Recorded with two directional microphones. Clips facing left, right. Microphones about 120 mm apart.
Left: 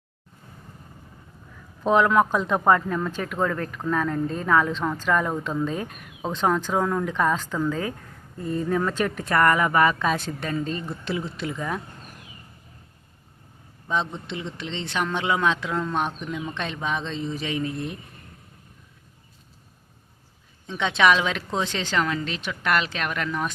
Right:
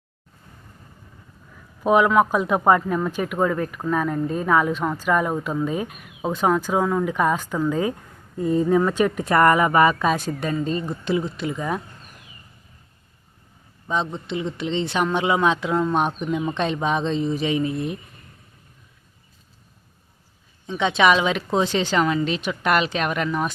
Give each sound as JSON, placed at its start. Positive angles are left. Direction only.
{"t": 1.8, "sound": "speech", "side_deg": -10}
{"t": 9.3, "sound": "speech", "side_deg": -20}
{"t": 13.8, "sound": "a man's voice", "side_deg": 0}
{"t": 20.7, "sound": "speech", "side_deg": -5}